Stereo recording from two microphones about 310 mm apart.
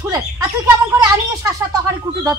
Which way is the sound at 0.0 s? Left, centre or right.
Centre.